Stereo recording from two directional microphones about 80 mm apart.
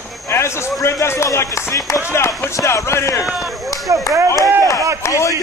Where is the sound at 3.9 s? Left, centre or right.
Right.